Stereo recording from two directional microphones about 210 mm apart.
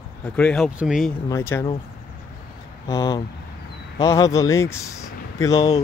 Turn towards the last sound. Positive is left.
turn(degrees=15)  # may be behind; listen again after turning